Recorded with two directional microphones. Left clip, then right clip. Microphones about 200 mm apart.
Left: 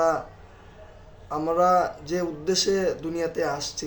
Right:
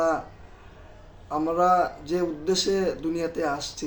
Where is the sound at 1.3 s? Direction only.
5° right (ahead or behind).